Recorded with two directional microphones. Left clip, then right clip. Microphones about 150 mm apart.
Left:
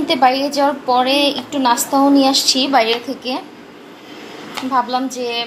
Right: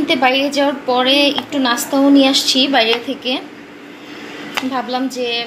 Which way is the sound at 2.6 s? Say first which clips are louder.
Right 3 dB; centre (ahead or behind).